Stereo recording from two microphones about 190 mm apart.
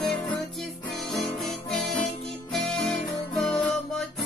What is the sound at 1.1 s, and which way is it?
Music, centre (ahead or behind).